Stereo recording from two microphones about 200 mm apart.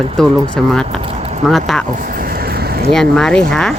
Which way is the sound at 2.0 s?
45° right (ahead or behind).